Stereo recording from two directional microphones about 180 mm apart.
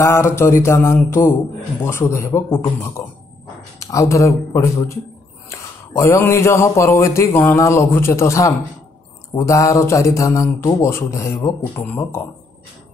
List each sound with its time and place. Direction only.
0.0 s speech: 15° left (ahead or behind)